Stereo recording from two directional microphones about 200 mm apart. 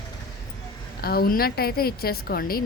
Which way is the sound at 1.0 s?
50° left (ahead or behind).